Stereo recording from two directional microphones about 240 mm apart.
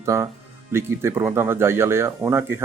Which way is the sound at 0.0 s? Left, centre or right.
Centre.